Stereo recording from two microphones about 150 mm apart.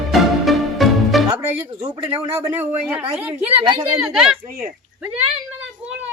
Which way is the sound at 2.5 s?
15° right (ahead or behind).